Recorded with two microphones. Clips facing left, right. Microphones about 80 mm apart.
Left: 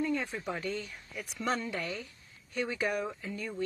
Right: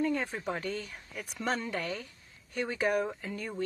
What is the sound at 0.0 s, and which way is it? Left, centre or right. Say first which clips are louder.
Speech: right 2 dB; right.